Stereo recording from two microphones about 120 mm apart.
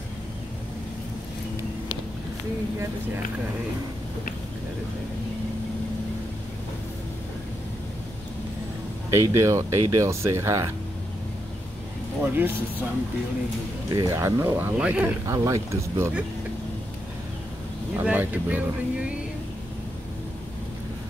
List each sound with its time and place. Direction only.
9.1 s speech: 25° right (ahead or behind)
12.2 s speech: 15° right (ahead or behind)
13.9 s speech: 25° right (ahead or behind)
14.8 s speech: 10° right (ahead or behind)
15.2 s speech: 30° right (ahead or behind)
17.9 s speech: 15° right (ahead or behind)